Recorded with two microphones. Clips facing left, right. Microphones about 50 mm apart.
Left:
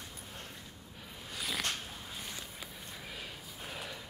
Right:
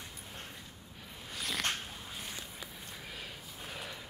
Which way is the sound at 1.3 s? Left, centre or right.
Centre.